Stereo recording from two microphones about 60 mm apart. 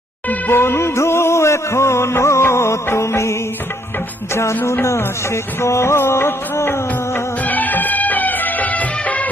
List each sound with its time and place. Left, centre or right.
0.3 s music: left
4.4 s music of bollywood: left
7.4 s music: left